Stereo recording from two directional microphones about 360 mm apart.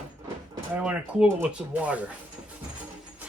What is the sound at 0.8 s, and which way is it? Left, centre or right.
Speech, centre.